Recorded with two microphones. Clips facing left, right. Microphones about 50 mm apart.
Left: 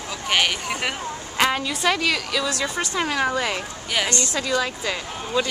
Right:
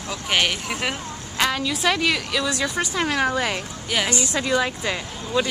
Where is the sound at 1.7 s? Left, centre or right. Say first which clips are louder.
Right 1 dB; centre.